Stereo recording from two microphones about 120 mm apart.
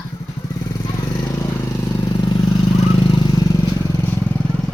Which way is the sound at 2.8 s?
45° left (ahead or behind).